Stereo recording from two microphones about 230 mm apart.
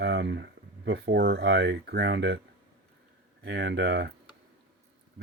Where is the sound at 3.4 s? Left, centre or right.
Right.